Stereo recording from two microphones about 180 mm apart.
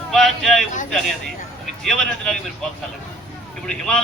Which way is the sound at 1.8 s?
5° left (ahead or behind).